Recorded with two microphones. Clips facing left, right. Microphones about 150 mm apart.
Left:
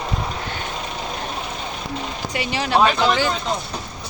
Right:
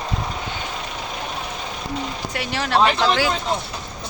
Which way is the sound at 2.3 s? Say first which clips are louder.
Left 1 dB; centre (ahead or behind).